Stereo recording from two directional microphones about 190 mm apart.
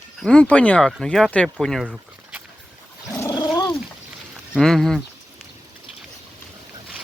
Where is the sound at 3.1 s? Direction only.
15° left (ahead or behind).